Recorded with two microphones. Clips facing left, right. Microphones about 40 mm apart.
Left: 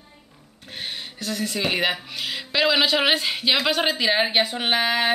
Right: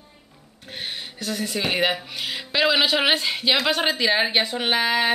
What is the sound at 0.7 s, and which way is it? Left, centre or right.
Speech, centre.